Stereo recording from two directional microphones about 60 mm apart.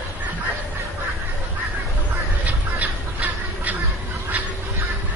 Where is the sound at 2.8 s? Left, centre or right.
Right.